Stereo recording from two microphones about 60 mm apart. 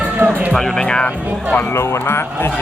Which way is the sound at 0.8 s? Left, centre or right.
Centre.